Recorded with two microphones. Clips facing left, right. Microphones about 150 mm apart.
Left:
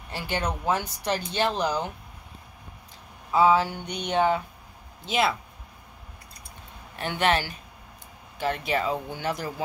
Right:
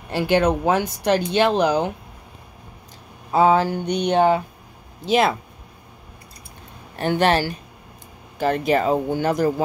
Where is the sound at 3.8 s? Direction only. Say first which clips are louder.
Right 11 dB; 85° right.